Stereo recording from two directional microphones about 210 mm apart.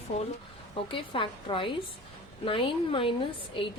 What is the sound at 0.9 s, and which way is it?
A woman's voice, 25° left (ahead or behind).